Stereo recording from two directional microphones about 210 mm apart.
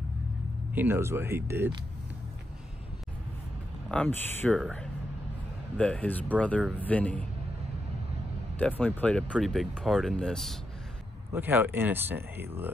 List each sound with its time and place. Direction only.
0.7 s speech: 10° right (ahead or behind)
3.9 s speech: 5° left (ahead or behind)
8.5 s speech: 5° left (ahead or behind)
11.3 s speech: 10° right (ahead or behind)